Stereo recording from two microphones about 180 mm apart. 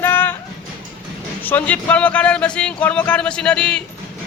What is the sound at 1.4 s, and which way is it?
Speech, 10° left (ahead or behind).